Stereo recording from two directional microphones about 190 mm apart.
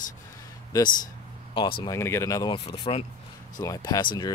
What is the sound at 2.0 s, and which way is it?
Speech, 15° left (ahead or behind).